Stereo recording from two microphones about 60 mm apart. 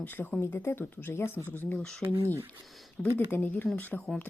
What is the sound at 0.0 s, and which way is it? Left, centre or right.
Speech, left.